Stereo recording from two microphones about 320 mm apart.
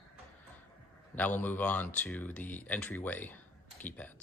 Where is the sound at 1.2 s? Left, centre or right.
Centre.